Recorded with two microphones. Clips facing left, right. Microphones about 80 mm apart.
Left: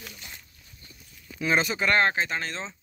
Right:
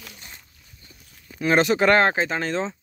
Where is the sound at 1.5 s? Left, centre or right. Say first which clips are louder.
Right 7 dB; right.